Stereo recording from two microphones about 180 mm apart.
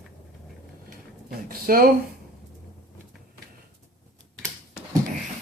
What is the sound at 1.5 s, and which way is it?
Speech, 55° right (ahead or behind).